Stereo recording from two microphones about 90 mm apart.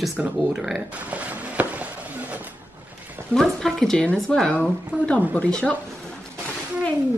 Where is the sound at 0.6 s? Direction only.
5° right (ahead or behind).